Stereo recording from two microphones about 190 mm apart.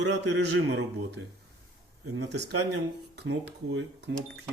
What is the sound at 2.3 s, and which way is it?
Speech, 65° right (ahead or behind).